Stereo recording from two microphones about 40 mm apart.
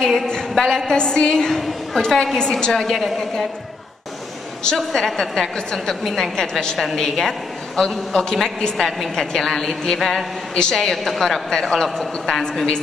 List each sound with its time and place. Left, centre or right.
0.0 s a woman's voice: centre
0.3 s a sound: centre
0.8 s a woman's voice: centre
4.7 s a woman's voice: centre
10.5 s a woman's voice: centre
10.8 s a woman's voice: centre